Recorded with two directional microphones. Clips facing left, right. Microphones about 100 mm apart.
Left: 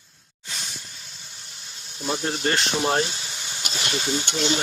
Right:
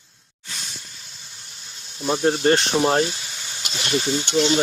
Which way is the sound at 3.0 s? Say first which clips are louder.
Right 3 dB; 30° left (ahead or behind).